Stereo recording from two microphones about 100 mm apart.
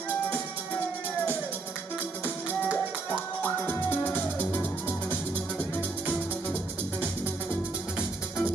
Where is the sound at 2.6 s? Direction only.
15° right (ahead or behind).